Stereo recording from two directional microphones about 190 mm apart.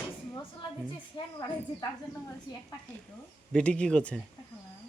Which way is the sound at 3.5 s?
5° left (ahead or behind).